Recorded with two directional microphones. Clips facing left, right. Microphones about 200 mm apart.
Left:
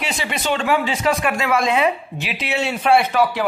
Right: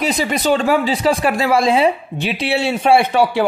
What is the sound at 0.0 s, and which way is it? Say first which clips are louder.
A man's voice: right 7 dB; 40° right (ahead or behind).